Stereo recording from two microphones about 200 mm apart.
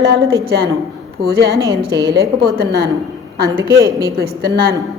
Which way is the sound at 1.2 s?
55° right (ahead or behind).